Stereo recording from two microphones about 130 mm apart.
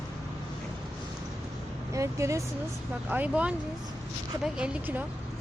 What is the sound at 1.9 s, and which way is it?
Speech, 25° right (ahead or behind).